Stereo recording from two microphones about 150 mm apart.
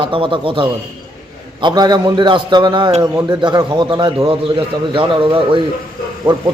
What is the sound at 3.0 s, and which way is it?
A man's voice, 20° right (ahead or behind).